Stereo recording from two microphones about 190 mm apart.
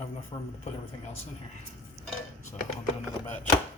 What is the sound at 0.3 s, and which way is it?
Speech, 25° left (ahead or behind).